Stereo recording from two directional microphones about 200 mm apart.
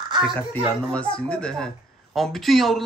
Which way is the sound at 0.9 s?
5° left (ahead or behind).